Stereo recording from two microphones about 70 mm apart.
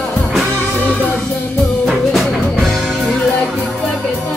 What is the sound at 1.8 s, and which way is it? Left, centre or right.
Music, centre.